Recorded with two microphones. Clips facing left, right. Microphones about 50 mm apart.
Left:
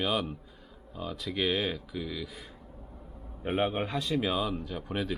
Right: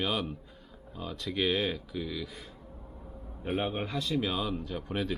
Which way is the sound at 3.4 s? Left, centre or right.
Centre.